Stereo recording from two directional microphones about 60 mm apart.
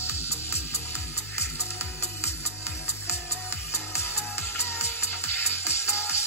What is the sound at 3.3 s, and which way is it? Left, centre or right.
Music, left.